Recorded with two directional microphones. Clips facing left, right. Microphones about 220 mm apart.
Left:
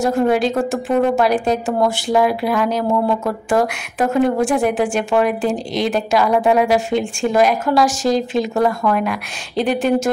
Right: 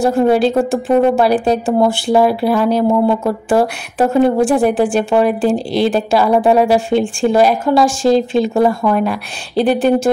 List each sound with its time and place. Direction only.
0.0 s a woman's voice: 30° right (ahead or behind)